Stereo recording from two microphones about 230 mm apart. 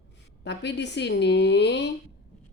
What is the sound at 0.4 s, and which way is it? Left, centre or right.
Speech, left.